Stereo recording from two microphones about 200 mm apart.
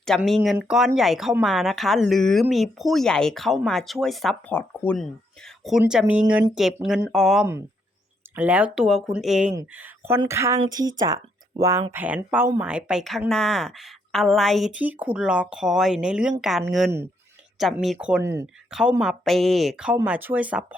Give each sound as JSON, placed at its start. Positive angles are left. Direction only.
{"t": 0.0, "sound": "speech", "side_deg": 0}
{"t": 5.8, "sound": "speech", "side_deg": -5}
{"t": 18.7, "sound": "speech", "side_deg": -5}